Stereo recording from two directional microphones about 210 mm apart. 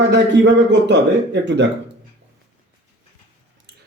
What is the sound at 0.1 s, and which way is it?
Speech, 55° right (ahead or behind).